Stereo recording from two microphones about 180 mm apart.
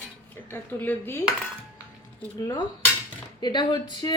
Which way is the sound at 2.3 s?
20° left (ahead or behind).